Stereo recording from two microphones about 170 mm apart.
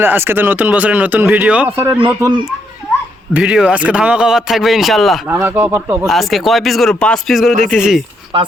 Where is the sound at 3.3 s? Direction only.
5° right (ahead or behind).